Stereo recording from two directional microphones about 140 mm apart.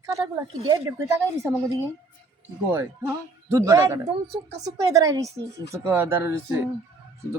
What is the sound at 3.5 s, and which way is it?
Speech, 20° right (ahead or behind).